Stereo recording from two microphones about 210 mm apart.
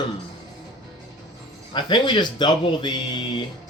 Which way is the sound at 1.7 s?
20° left (ahead or behind).